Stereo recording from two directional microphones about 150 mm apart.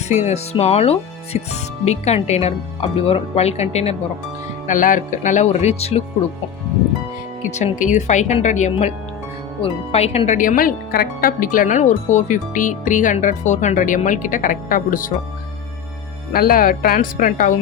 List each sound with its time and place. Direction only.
0.1 s speech: 50° left (ahead or behind)
4.6 s speech: 60° left (ahead or behind); by 6.0 s 45° left (ahead or behind)
7.4 s speech: 55° left (ahead or behind)
9.6 s speech: 40° left (ahead or behind); by 15.1 s 65° left (ahead or behind)
16.3 s speech: 75° left (ahead or behind)